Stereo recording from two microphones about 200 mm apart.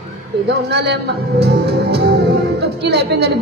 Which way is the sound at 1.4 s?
55° right (ahead or behind).